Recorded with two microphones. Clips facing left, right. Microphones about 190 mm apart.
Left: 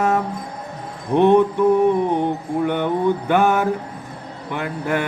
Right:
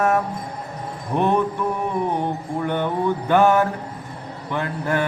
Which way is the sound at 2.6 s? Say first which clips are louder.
Left 2 dB; 15° left (ahead or behind).